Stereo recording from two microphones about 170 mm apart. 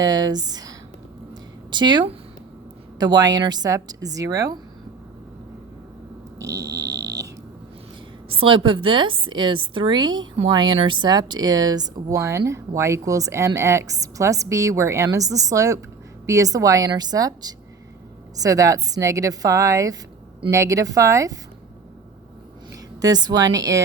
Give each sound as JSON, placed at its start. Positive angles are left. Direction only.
{"t": 0.0, "sound": "a woman's voice", "side_deg": -25}
{"t": 1.3, "sound": "a sound", "side_deg": -25}
{"t": 3.0, "sound": "speech", "side_deg": -25}
{"t": 6.4, "sound": "a sound", "side_deg": -20}
{"t": 8.3, "sound": "speech", "side_deg": -30}
{"t": 22.7, "sound": "a woman's voice", "side_deg": -20}